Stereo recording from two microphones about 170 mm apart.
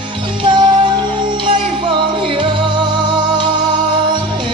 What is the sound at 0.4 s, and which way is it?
Music, 25° right (ahead or behind).